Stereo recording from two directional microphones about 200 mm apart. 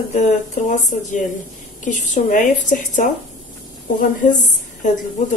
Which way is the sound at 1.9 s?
40° left (ahead or behind).